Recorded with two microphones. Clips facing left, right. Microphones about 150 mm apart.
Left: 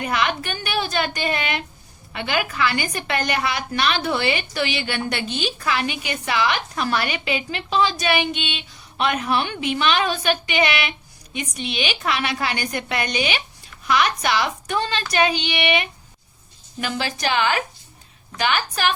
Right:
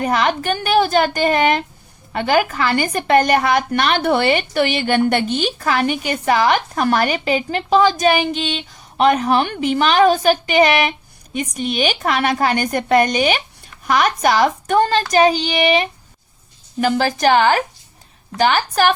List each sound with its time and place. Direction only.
0.0 s a woman's voice: 40° right (ahead or behind)